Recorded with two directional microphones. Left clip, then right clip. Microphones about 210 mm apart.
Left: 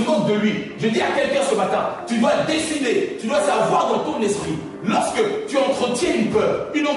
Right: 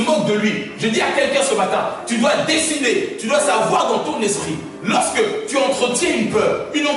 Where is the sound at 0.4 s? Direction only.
10° left (ahead or behind).